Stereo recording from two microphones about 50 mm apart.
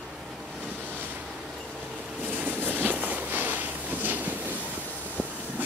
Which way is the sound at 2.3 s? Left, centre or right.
Right.